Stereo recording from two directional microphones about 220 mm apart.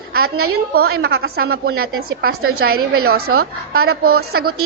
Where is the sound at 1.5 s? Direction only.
70° right (ahead or behind).